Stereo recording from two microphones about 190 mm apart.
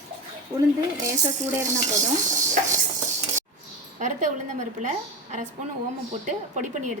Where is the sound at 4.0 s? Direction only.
40° right (ahead or behind).